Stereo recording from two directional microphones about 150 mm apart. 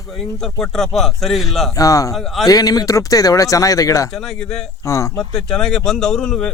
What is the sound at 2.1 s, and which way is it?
Speech, centre (ahead or behind).